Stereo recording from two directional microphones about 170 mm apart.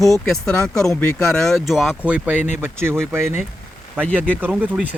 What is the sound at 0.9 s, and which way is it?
Speech, 15° left (ahead or behind).